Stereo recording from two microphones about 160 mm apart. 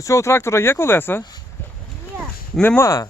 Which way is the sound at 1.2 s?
25° left (ahead or behind).